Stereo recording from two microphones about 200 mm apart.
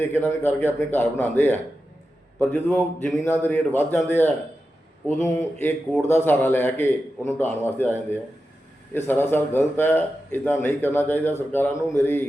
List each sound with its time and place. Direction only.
0.0 s a man's voice: 10° left (ahead or behind)